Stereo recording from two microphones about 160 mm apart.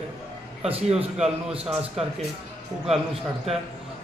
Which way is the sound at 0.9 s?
40° right (ahead or behind).